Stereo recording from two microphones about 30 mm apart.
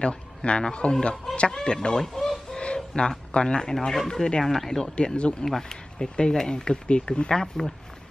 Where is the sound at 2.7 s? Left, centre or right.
Left.